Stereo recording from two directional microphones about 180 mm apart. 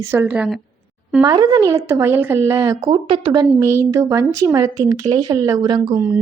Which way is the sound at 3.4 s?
15° right (ahead or behind).